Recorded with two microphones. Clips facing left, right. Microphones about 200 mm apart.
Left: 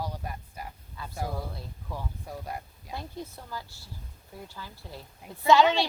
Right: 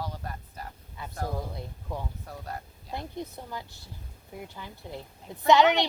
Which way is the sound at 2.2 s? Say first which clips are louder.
Left 2 dB; 10° left (ahead or behind).